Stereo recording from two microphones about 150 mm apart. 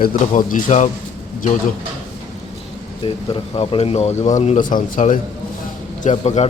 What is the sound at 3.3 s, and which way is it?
Speech, 40° left (ahead or behind).